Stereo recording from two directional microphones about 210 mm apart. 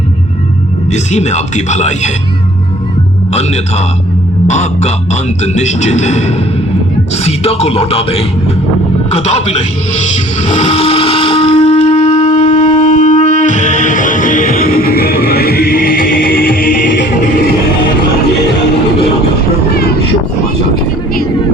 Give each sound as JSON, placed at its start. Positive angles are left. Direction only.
{"t": 0.9, "sound": "speech", "side_deg": 35}
{"t": 3.3, "sound": "speech", "side_deg": 30}
{"t": 9.1, "sound": "music", "side_deg": 30}